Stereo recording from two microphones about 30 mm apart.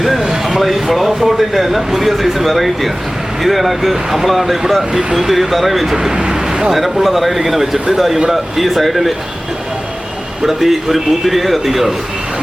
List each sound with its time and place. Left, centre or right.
0.2 s a man's voice: centre
6.1 s vehicle: right
6.7 s a man's voice: centre
10.4 s a man's voice: centre